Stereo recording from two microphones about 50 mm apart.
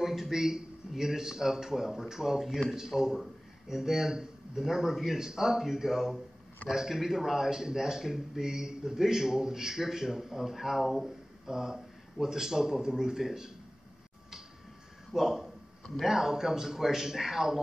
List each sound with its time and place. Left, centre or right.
0.0 s speech: centre
15.1 s a man's voice: centre